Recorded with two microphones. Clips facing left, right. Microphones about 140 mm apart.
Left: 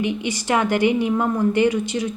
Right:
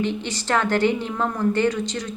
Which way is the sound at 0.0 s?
15° left (ahead or behind).